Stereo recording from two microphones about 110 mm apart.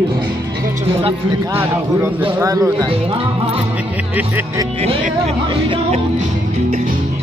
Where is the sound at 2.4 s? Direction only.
30° right (ahead or behind).